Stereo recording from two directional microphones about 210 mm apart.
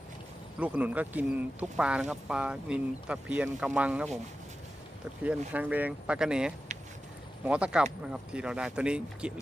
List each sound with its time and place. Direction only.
0.6 s speech: 5° right (ahead or behind)
5.2 s speech: 5° right (ahead or behind)
6.7 s a sound: 35° right (ahead or behind)
7.4 s speech: 5° right (ahead or behind)